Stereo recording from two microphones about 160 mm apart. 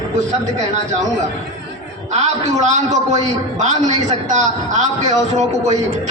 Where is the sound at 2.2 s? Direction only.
45° right (ahead or behind).